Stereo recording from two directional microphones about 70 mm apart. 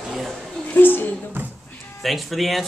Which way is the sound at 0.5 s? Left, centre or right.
Centre.